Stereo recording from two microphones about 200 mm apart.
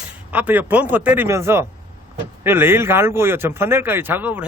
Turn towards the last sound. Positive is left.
turn(degrees=-10)  # may be behind; listen again after turning